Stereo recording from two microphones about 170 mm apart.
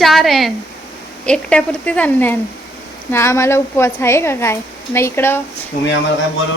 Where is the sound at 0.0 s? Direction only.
Centre (ahead or behind).